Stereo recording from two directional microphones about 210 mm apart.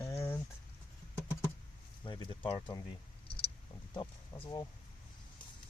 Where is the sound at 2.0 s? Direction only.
20° left (ahead or behind).